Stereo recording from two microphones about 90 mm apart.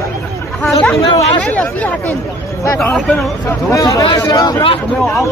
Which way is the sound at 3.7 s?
35° left (ahead or behind).